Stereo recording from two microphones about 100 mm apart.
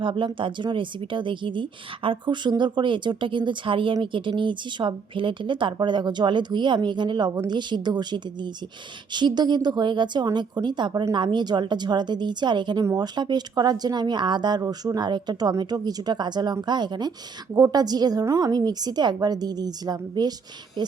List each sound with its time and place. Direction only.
0.0 s speech: 55° right (ahead or behind)
12.8 s a woman's voice: 35° right (ahead or behind)
13.1 s a woman's voice: 45° right (ahead or behind)